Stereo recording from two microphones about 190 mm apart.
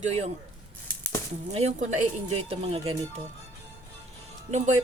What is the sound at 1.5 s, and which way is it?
A woman's voice, 35° right (ahead or behind).